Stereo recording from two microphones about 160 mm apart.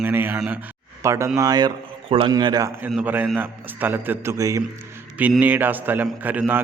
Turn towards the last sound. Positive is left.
turn(degrees=-10)  # may be behind; listen again after turning